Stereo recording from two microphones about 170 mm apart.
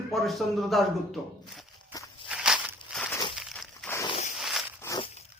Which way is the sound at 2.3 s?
5° right (ahead or behind).